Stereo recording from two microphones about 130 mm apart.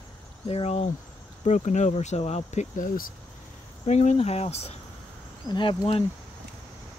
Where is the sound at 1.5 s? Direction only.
65° left (ahead or behind).